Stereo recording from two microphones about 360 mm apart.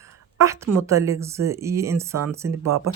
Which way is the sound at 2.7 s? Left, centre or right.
Right.